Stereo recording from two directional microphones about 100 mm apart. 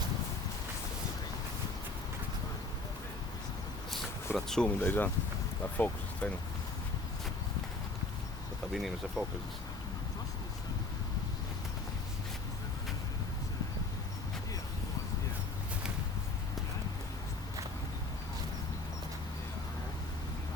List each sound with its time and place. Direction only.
4.4 s speech: 5° left (ahead or behind)
4.8 s speech: 20° left (ahead or behind)
8.7 s speech: 5° right (ahead or behind)